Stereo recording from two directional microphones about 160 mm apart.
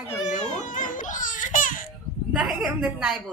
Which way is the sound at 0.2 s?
50° left (ahead or behind).